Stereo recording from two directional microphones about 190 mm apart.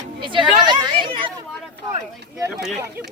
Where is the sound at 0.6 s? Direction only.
20° right (ahead or behind).